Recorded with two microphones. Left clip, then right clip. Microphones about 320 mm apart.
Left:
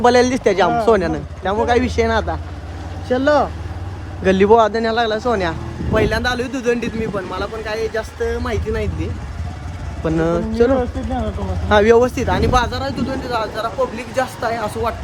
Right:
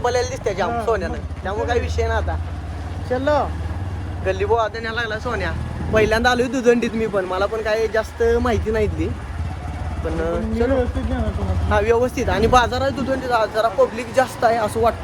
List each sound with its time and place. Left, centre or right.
0.0 s speech: left
5.9 s speech: centre
10.2 s speech: left
11.7 s speech: left
12.0 s speech: centre